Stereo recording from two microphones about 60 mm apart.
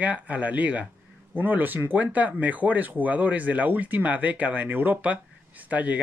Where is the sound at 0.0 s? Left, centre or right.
Right.